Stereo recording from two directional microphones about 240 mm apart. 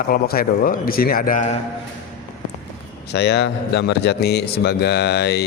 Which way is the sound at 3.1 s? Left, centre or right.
Left.